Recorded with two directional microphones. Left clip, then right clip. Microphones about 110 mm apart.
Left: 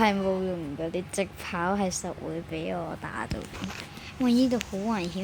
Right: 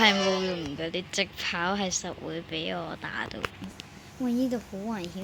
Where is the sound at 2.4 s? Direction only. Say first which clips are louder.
Right 4 dB; 5° left (ahead or behind).